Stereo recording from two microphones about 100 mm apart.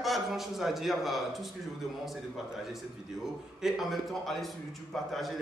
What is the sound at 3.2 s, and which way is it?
A man's voice, 5° right (ahead or behind).